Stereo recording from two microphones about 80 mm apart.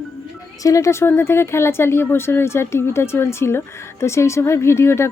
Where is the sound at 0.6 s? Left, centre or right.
Left.